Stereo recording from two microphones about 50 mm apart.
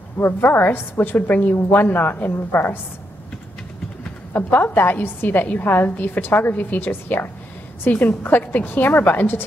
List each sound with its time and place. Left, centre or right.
0.2 s a woman's voice: left
4.3 s a woman's voice: left